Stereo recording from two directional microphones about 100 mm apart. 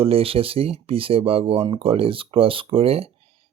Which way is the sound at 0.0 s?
70° right (ahead or behind).